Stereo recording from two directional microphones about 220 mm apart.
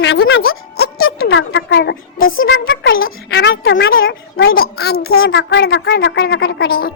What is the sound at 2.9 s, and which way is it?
Speech, 45° left (ahead or behind).